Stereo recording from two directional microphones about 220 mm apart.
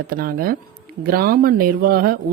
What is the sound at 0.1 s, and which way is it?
A woman's voice, 40° right (ahead or behind).